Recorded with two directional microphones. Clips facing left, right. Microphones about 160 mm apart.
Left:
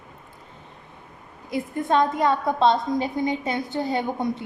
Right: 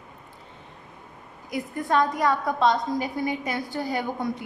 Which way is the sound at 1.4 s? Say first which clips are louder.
Left 3 dB; 25° left (ahead or behind).